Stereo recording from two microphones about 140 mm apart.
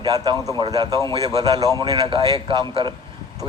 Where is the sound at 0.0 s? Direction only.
30° right (ahead or behind).